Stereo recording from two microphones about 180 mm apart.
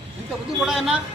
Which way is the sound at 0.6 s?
Centre (ahead or behind).